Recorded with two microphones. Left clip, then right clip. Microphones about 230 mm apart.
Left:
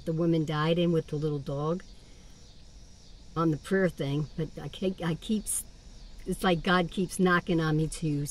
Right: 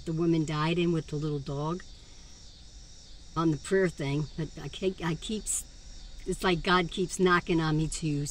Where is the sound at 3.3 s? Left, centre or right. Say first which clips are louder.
Right 1 dB; centre.